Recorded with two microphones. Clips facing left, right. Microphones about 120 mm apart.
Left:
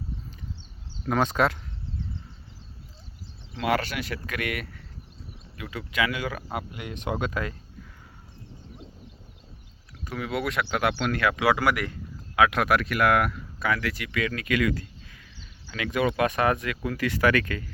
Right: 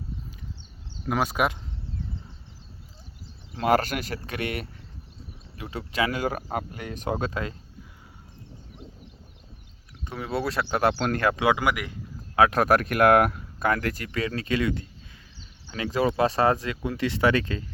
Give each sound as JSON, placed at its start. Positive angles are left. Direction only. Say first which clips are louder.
{"t": 1.0, "sound": "speech", "louder": "left 1 dB", "side_deg": -10}
{"t": 3.5, "sound": "speech", "louder": "right 4 dB", "side_deg": -40}
{"t": 10.0, "sound": "speech", "louder": "even", "side_deg": -25}
{"t": 11.4, "sound": "speech", "louder": "left 2 dB", "side_deg": -20}
{"t": 12.4, "sound": "speech", "louder": "right 2 dB", "side_deg": -35}